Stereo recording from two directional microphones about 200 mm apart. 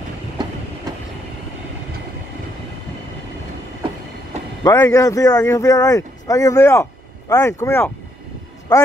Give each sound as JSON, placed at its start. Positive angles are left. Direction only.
{"t": 0.4, "sound": "train", "side_deg": -20}
{"t": 4.6, "sound": "speech", "side_deg": 15}